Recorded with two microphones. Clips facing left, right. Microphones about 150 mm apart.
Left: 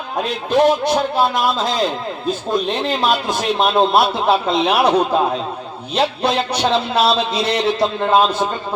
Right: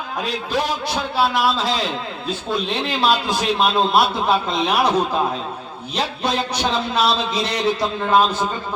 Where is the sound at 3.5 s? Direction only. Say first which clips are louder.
Left 3 dB; 25° left (ahead or behind).